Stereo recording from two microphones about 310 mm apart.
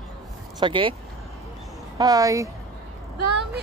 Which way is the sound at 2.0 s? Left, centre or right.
Centre.